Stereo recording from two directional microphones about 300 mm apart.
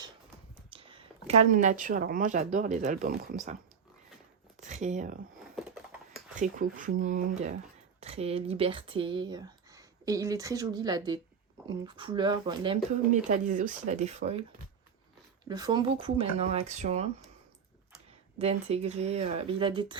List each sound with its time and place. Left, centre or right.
0.7 s a sound: centre
1.5 s speech: right
4.6 s speech: right
6.4 s speech: right
15.4 s speech: centre
18.3 s speech: right